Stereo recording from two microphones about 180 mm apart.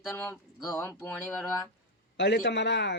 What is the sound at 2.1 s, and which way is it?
Speech, 70° left (ahead or behind).